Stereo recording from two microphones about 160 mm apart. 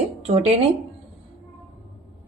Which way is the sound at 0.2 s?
40° right (ahead or behind).